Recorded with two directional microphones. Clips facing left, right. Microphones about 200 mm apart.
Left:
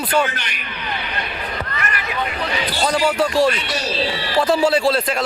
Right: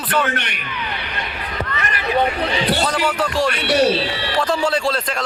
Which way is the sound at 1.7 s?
30° right (ahead or behind).